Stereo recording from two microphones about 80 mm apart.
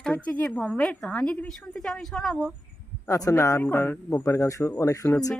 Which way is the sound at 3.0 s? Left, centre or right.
Left.